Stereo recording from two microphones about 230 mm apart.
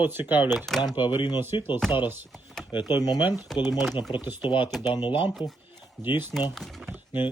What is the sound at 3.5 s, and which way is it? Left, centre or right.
Speech, centre.